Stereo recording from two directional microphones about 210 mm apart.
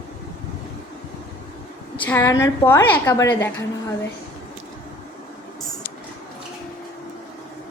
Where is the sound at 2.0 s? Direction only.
10° left (ahead or behind).